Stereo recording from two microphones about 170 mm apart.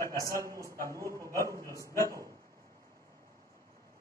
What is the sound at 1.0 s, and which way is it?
Speech, 20° right (ahead or behind).